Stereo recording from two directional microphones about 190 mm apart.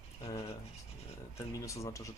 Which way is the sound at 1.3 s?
15° left (ahead or behind).